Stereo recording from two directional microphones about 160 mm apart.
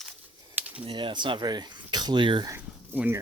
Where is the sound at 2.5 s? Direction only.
15° right (ahead or behind).